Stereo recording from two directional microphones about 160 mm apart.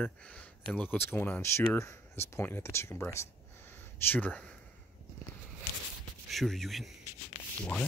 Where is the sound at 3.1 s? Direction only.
15° left (ahead or behind).